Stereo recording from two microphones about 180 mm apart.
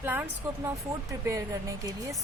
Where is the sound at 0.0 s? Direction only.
10° right (ahead or behind).